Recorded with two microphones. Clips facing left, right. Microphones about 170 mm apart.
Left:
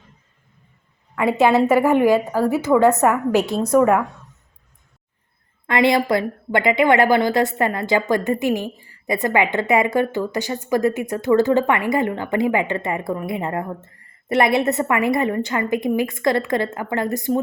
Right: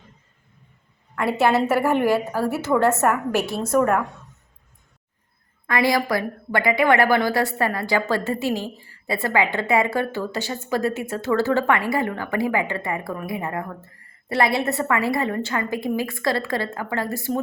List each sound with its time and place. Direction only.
1.1 s a woman's voice: 15° left (ahead or behind)
3.8 s a woman's voice: 5° left (ahead or behind)
5.6 s a woman's voice: 25° left (ahead or behind)